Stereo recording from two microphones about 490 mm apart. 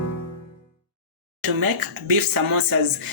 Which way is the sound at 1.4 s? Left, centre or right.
Right.